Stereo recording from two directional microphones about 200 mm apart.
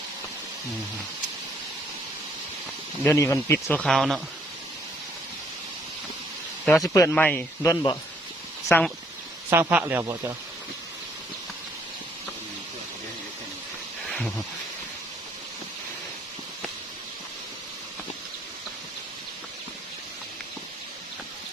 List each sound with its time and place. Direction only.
3.0 s speech: 10° left (ahead or behind)
6.8 s speech: 15° left (ahead or behind)
9.5 s speech: 10° right (ahead or behind)
14.1 s a sound: centre (ahead or behind)